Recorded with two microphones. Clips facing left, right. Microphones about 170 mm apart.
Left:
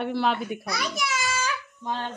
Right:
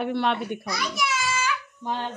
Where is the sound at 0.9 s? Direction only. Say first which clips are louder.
Right 2 dB; 45° left (ahead or behind).